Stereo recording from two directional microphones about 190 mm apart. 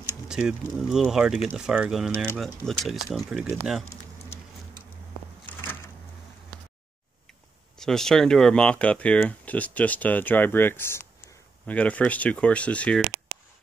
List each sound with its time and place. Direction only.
0.3 s speech: 5° right (ahead or behind)
5.5 s a sound: 10° left (ahead or behind)
7.7 s speech: 5° left (ahead or behind)